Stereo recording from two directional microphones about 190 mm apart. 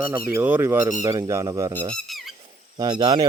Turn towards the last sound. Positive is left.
turn(degrees=-20)  # may be behind; listen again after turning